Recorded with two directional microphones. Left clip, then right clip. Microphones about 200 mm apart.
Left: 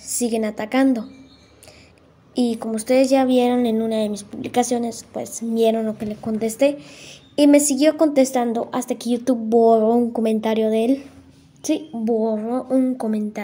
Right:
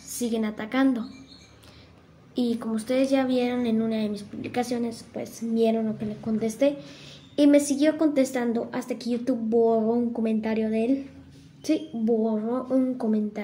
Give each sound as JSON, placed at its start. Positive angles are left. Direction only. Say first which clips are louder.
{"t": 0.0, "sound": "a woman's voice", "louder": "left 6 dB", "side_deg": 30}
{"t": 2.3, "sound": "speech", "louder": "left 5 dB", "side_deg": 30}